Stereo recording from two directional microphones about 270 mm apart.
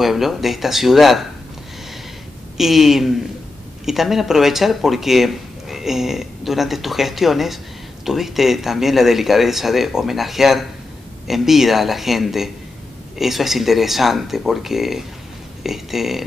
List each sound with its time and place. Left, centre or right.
0.0 s speech: centre
2.5 s speech: centre